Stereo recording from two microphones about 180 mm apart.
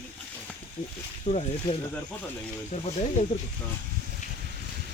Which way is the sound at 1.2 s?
35° left (ahead or behind).